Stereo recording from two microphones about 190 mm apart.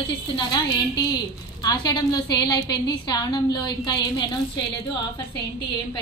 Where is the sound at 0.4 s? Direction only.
20° left (ahead or behind).